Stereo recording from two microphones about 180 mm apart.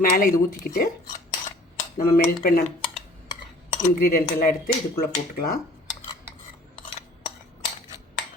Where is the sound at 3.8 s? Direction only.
55° left (ahead or behind).